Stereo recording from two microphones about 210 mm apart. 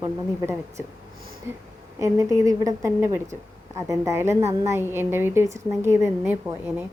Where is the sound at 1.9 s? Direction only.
15° right (ahead or behind).